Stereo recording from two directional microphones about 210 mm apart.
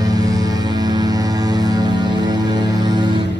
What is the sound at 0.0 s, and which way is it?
Music, 15° right (ahead or behind).